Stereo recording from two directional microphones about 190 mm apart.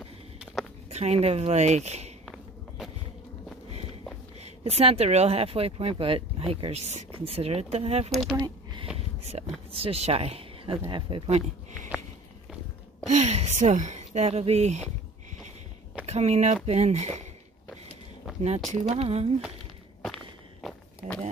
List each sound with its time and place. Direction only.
0.8 s speech: 35° right (ahead or behind)
4.4 s speech: 35° right (ahead or behind)
8.1 s speech: centre (ahead or behind)
8.4 s a sound: 20° right (ahead or behind)
9.7 s speech: 30° right (ahead or behind)
13.1 s speech: 35° right (ahead or behind)
16.1 s speech: 35° right (ahead or behind)
18.7 s speech: 35° right (ahead or behind)
20.6 s walk: centre (ahead or behind)